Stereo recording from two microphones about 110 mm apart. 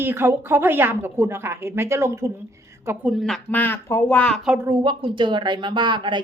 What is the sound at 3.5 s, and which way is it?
Speech, 20° left (ahead or behind).